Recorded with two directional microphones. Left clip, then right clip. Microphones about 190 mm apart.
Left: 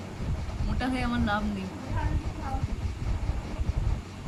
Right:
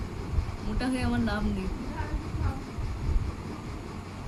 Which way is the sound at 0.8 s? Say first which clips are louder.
Even; 15° left (ahead or behind).